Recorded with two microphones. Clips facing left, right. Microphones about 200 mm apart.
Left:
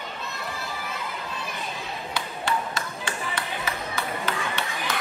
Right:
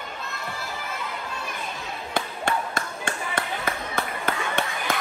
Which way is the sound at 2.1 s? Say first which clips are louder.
Right 2 dB; 50° right (ahead or behind).